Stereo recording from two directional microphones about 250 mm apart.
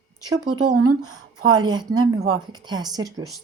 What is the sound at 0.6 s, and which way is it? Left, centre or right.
Speech, right.